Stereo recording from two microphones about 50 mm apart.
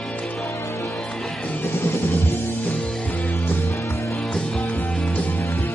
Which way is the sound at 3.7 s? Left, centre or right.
Left.